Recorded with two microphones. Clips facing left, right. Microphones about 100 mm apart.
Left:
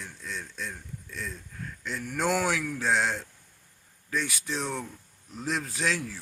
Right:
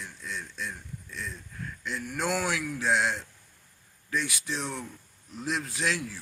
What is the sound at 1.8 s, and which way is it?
Speech, 45° left (ahead or behind).